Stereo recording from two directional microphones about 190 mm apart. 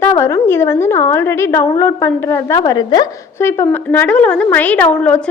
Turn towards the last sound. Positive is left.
turn(degrees=5)  # may be behind; listen again after turning